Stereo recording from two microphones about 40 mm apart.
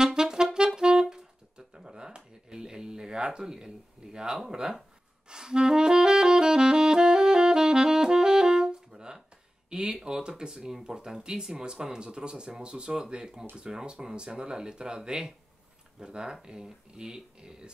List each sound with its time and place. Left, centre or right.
0.0 s clarinet: centre
0.7 s music: centre
1.7 s a sound: centre
4.5 s speech: centre
5.3 s saxophone: centre
9.7 s speech: centre